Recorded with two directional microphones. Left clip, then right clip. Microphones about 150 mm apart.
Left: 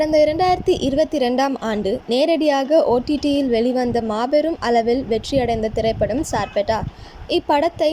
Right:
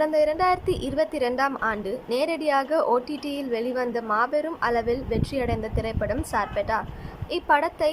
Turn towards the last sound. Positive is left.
turn(degrees=25)  # may be behind; listen again after turning